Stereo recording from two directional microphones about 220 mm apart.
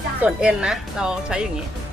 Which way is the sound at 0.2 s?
5° right (ahead or behind).